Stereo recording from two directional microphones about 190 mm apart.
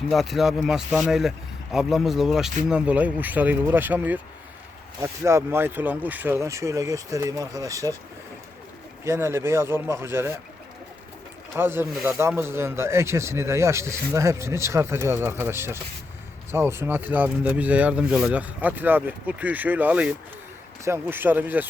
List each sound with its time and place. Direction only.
0.1 s speech: centre (ahead or behind); by 7.9 s 15° right (ahead or behind)
9.0 s speech: 15° right (ahead or behind)
11.5 s speech: 10° right (ahead or behind)